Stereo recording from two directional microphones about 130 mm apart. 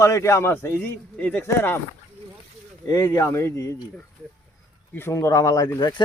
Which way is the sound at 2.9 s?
20° left (ahead or behind).